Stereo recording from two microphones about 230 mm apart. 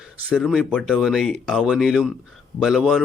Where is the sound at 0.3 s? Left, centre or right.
Centre.